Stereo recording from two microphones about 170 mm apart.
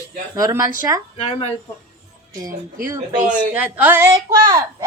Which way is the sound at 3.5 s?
10° right (ahead or behind).